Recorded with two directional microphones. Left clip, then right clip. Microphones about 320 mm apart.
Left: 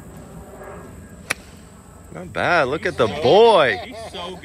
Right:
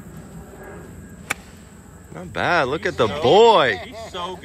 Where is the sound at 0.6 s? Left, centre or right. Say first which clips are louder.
Left 2 dB; left.